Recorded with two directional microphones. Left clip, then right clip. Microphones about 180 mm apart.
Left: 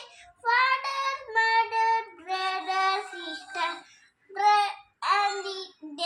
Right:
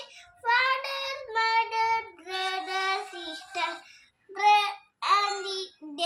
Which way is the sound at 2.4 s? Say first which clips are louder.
Left 1 dB; 20° right (ahead or behind).